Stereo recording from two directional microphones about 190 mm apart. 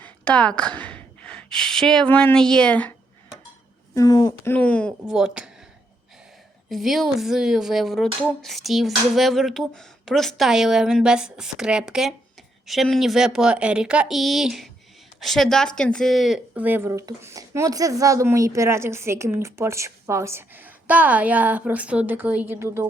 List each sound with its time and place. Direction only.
0.0 s a woman's voice: 5° left (ahead or behind)
3.9 s a woman's voice: 20° left (ahead or behind)
4.5 s speech: 5° left (ahead or behind)
6.7 s speech: centre (ahead or behind)